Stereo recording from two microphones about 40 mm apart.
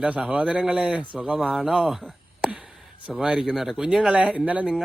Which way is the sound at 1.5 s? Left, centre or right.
Centre.